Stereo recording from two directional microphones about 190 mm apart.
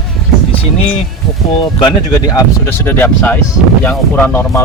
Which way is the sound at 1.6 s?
20° left (ahead or behind).